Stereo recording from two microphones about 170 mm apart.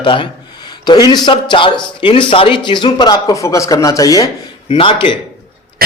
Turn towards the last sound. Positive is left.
turn(degrees=30)  # may be behind; listen again after turning